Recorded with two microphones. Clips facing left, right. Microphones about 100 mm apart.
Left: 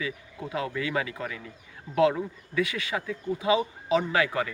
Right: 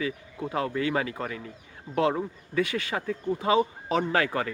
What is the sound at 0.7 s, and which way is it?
Speech, 35° right (ahead or behind).